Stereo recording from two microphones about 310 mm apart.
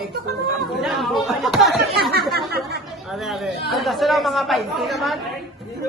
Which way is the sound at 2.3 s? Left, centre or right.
Right.